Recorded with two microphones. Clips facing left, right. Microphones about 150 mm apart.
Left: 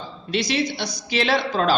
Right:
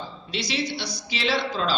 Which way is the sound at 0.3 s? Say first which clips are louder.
Left 6 dB; 50° left (ahead or behind).